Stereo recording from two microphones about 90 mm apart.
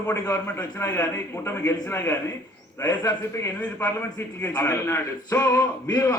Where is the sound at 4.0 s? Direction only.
20° left (ahead or behind).